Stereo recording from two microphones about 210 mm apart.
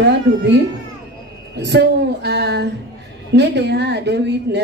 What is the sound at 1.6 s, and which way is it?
A woman's voice, 55° right (ahead or behind).